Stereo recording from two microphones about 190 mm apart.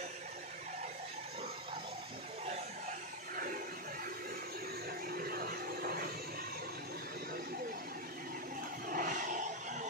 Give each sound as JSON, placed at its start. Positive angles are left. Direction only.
{"t": 5.1, "sound": "music", "side_deg": -50}
{"t": 8.8, "sound": "vehicle", "side_deg": -45}